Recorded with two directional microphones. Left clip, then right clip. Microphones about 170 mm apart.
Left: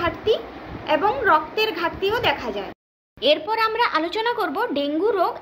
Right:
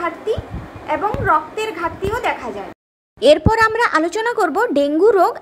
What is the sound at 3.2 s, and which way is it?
A woman's voice, 40° right (ahead or behind).